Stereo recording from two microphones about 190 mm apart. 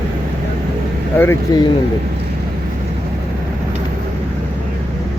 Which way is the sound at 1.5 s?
20° left (ahead or behind).